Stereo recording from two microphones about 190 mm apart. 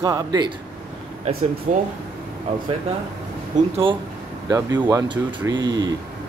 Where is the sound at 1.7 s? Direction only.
40° right (ahead or behind).